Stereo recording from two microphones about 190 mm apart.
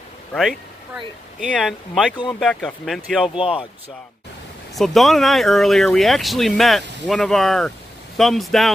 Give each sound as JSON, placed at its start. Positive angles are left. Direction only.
{"t": 0.3, "sound": "speech", "side_deg": 0}
{"t": 4.7, "sound": "speech", "side_deg": 0}